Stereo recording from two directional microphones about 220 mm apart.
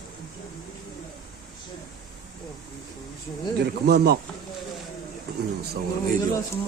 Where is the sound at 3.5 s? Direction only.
45° right (ahead or behind).